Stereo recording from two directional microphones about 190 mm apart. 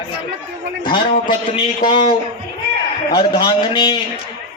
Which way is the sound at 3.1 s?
25° left (ahead or behind).